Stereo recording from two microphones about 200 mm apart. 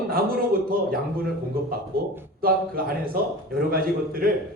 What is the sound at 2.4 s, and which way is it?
A man's voice, 45° right (ahead or behind).